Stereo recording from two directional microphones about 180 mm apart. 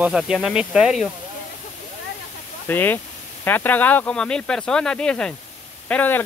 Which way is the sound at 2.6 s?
10° left (ahead or behind).